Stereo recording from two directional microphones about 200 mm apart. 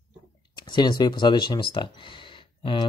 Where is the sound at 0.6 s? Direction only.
20° left (ahead or behind).